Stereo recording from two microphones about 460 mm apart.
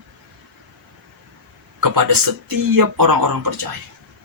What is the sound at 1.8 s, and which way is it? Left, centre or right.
Speech, right.